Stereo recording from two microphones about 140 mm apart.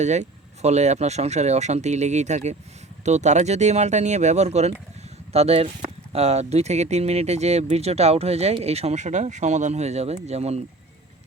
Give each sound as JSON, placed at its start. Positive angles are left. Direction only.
{"t": 0.0, "sound": "speech", "side_deg": -55}